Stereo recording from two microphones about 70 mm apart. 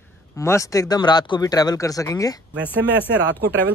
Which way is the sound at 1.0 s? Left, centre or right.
Left.